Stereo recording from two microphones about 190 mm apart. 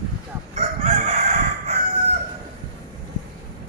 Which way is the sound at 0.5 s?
35° right (ahead or behind).